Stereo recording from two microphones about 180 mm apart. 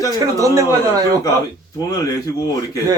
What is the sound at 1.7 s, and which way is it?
Speech, 20° left (ahead or behind).